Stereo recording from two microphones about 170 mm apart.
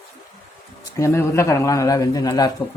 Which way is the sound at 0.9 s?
15° left (ahead or behind).